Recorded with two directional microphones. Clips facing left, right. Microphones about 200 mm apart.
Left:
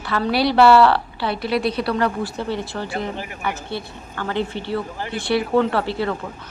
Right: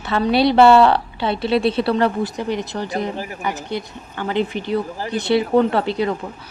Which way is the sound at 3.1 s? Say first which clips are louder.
Right 3 dB; 35° right (ahead or behind).